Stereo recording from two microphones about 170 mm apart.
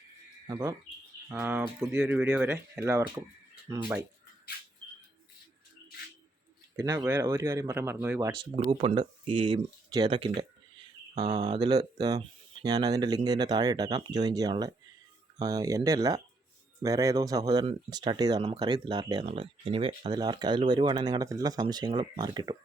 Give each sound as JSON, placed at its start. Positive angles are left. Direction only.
{"t": 0.4, "sound": "speech", "side_deg": -20}
{"t": 1.3, "sound": "speech", "side_deg": -10}
{"t": 6.7, "sound": "speech", "side_deg": -20}
{"t": 8.5, "sound": "speech", "side_deg": -35}
{"t": 11.1, "sound": "speech", "side_deg": -40}
{"t": 11.5, "sound": "speech", "side_deg": -25}